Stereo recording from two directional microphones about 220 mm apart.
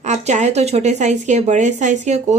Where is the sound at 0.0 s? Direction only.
30° right (ahead or behind).